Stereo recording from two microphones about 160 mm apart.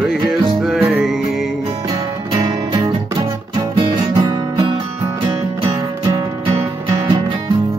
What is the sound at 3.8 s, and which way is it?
Music, 25° right (ahead or behind).